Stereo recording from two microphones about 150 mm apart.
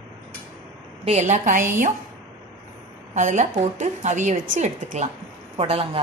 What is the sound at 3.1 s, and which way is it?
A woman's voice, 55° right (ahead or behind).